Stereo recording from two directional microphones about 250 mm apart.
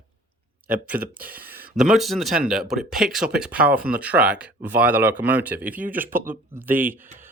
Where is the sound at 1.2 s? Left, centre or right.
Right.